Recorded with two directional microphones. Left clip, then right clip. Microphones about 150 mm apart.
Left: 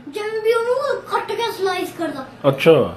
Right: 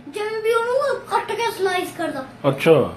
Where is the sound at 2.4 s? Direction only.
5° left (ahead or behind).